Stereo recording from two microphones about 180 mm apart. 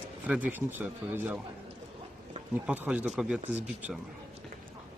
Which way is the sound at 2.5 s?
10° right (ahead or behind).